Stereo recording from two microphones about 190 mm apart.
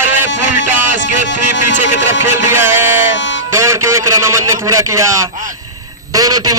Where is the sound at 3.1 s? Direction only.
70° left (ahead or behind).